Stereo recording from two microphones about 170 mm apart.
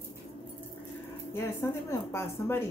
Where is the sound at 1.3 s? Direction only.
15° left (ahead or behind).